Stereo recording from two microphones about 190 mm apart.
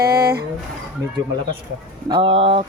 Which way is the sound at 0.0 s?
55° right (ahead or behind).